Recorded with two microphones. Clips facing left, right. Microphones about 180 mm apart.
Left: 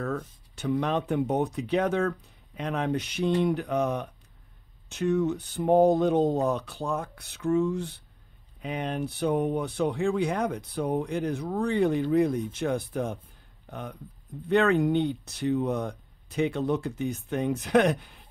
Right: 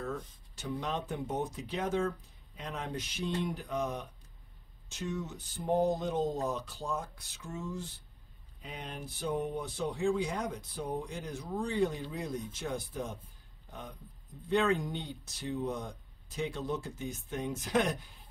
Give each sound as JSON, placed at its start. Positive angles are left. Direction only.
{"t": 0.0, "sound": "speech", "side_deg": 65}